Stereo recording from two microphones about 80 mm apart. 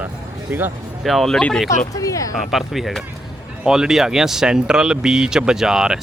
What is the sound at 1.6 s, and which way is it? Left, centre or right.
Speech, left.